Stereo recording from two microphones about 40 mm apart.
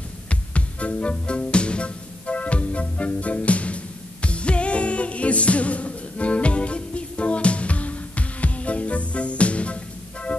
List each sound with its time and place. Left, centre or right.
0.3 s music: left